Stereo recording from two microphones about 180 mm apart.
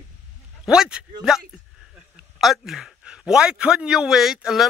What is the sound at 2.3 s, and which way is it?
A man's voice, centre (ahead or behind).